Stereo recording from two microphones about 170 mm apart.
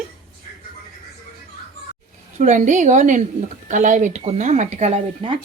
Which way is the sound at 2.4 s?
45° right (ahead or behind).